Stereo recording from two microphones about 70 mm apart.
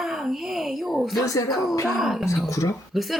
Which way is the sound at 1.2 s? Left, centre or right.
Left.